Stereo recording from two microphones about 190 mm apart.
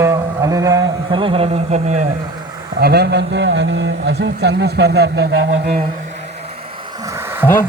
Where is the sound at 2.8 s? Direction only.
60° right (ahead or behind).